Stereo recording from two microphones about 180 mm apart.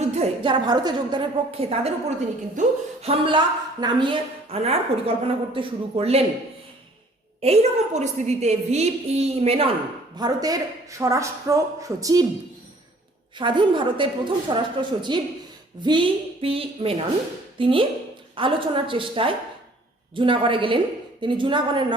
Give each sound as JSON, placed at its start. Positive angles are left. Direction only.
{"t": 0.1, "sound": "a woman's voice", "side_deg": -30}
{"t": 7.4, "sound": "a woman's voice", "side_deg": -35}
{"t": 10.2, "sound": "speech", "side_deg": -20}
{"t": 13.4, "sound": "a woman's voice", "side_deg": -25}